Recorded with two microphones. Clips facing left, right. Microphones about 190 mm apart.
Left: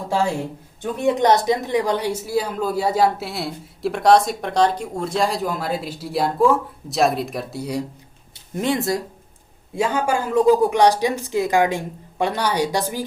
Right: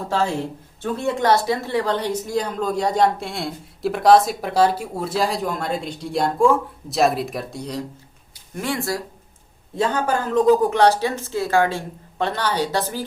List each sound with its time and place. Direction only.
0.8 s speech: 15° left (ahead or behind)
8.5 s speech: 20° left (ahead or behind)